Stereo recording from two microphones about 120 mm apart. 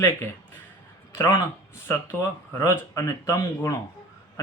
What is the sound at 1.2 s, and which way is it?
Speech, 35° left (ahead or behind).